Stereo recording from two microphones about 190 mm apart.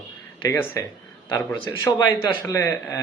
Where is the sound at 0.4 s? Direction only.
15° left (ahead or behind).